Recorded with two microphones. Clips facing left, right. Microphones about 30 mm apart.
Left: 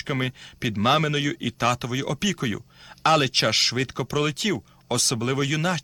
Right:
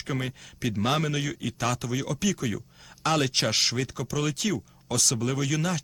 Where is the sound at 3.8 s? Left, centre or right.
Left.